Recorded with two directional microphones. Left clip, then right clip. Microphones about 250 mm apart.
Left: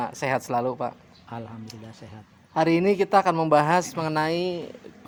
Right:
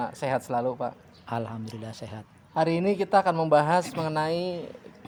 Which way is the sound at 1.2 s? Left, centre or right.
Right.